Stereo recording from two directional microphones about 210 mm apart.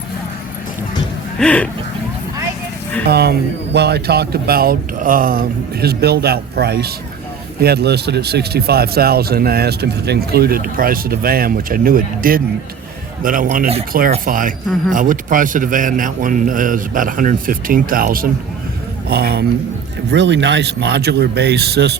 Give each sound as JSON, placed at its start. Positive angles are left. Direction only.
{"t": 1.4, "sound": "speech", "side_deg": 5}
{"t": 3.1, "sound": "a man's voice", "side_deg": -50}